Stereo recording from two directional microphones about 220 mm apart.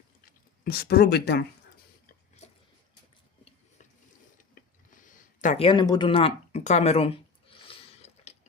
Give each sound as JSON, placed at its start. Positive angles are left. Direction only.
{"t": 0.6, "sound": "speech", "side_deg": 45}
{"t": 4.9, "sound": "speech", "side_deg": 35}
{"t": 7.7, "sound": "a sound", "side_deg": 30}